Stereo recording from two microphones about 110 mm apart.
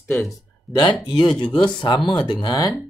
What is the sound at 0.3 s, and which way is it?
Speech, 40° left (ahead or behind).